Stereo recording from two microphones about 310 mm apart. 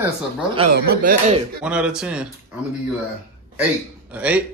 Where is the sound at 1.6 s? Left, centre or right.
Centre.